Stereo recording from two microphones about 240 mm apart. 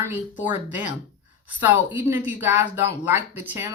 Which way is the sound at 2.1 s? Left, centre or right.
Centre.